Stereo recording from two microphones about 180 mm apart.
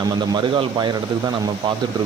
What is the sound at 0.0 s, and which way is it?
Speech, 25° right (ahead or behind).